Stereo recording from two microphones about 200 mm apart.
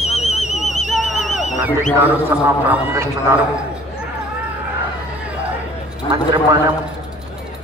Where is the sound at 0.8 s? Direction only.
Centre (ahead or behind).